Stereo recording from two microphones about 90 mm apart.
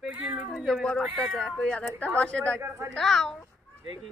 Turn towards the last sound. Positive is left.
turn(degrees=5)  # may be behind; listen again after turning